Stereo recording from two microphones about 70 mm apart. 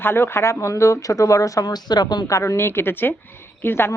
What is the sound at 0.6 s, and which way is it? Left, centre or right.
Speech, left.